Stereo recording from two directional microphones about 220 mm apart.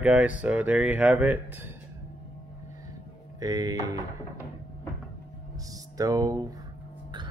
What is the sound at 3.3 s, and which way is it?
Speech, 15° right (ahead or behind).